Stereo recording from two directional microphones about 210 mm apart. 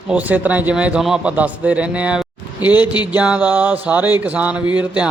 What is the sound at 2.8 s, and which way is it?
Speech, 20° left (ahead or behind).